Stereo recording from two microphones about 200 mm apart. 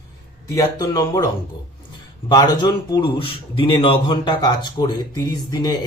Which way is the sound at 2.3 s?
20° left (ahead or behind).